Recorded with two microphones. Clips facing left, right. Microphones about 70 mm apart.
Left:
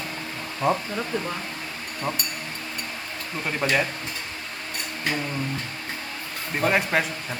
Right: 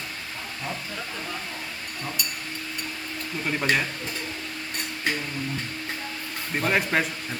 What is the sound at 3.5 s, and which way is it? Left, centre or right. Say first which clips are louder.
Speech: left 1 dB; centre.